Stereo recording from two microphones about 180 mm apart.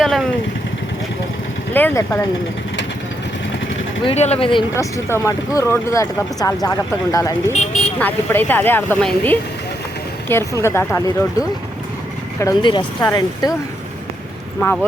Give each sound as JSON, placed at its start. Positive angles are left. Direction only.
{"t": 0.0, "sound": "speech", "side_deg": 0}
{"t": 1.7, "sound": "speech", "side_deg": 15}
{"t": 4.0, "sound": "speech", "side_deg": 35}
{"t": 4.7, "sound": "speech", "side_deg": 15}
{"t": 7.5, "sound": "speech", "side_deg": 40}
{"t": 7.9, "sound": "speech", "side_deg": 10}
{"t": 14.6, "sound": "speech", "side_deg": 10}